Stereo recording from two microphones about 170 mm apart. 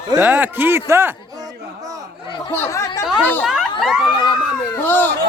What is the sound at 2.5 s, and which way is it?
Speech, 15° left (ahead or behind).